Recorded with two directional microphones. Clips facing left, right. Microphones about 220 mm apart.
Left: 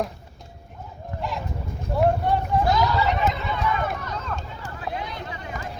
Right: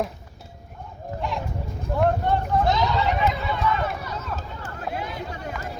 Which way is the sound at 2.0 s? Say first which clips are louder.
Left 1 dB; 10° left (ahead or behind).